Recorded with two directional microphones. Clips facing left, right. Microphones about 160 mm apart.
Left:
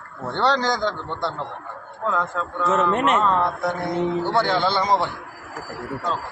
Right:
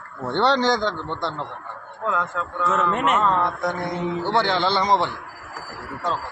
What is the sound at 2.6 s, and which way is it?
Speech, 25° left (ahead or behind).